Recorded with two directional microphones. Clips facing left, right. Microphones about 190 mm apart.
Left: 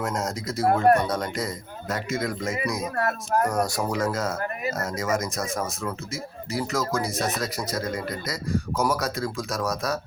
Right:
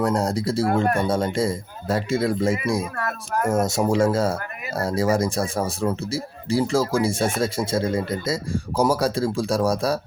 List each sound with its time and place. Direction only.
0.0 s speech: 35° right (ahead or behind)
3.0 s speech: 35° left (ahead or behind)
3.4 s speech: 25° right (ahead or behind)